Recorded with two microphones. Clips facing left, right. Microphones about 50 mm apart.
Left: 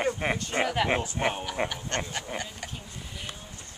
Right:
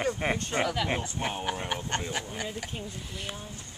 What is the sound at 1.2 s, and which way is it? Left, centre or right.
Speech, left.